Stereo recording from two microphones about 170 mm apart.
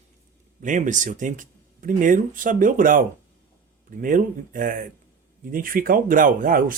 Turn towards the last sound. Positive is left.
turn(degrees=-55)  # may be behind; listen again after turning